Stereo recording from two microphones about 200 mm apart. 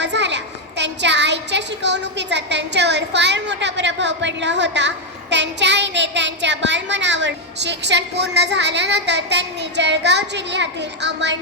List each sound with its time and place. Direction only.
0.0 s a child's voice: 60° right (ahead or behind)